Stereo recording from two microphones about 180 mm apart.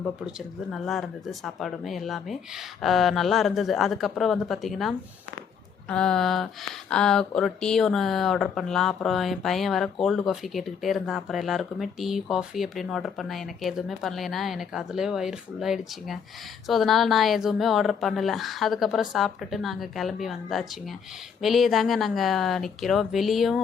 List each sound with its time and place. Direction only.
0.7 s speech: centre (ahead or behind)